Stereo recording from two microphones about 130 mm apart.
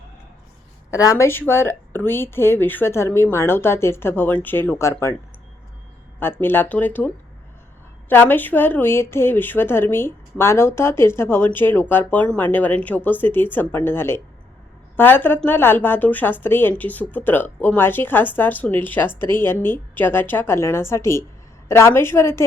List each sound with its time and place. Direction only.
0.9 s speech: 25° left (ahead or behind)
6.1 s speech: 15° left (ahead or behind)
8.1 s a woman's voice: 15° left (ahead or behind)